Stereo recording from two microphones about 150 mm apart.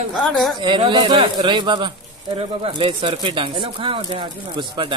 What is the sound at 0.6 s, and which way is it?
Speech, 30° right (ahead or behind).